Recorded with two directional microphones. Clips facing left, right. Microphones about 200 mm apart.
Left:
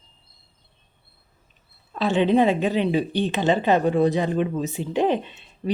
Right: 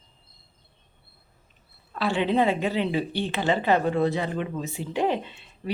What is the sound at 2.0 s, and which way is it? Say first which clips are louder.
A woman's voice: left 4 dB; 20° left (ahead or behind).